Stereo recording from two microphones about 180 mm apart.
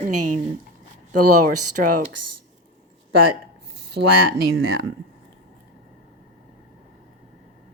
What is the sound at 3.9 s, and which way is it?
Speech, 60° right (ahead or behind).